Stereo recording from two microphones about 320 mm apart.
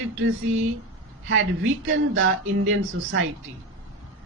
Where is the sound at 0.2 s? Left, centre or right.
Right.